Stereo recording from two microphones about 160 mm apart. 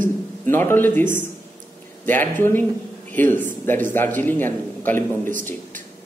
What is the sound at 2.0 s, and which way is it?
A man's voice, 10° left (ahead or behind).